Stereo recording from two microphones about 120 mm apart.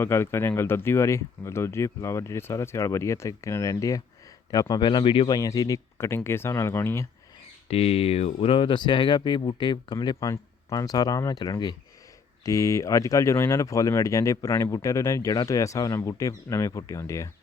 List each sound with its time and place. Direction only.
0.0 s speech: 20° left (ahead or behind); by 5.4 s 45° left (ahead or behind)
5.4 s speech: 30° left (ahead or behind)
7.7 s speech: 55° left (ahead or behind); by 17.2 s 25° left (ahead or behind)